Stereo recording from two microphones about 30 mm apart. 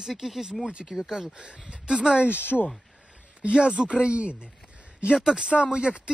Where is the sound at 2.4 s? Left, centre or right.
Left.